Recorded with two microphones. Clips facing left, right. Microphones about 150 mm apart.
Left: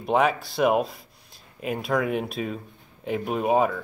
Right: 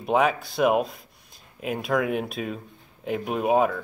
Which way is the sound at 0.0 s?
Centre (ahead or behind).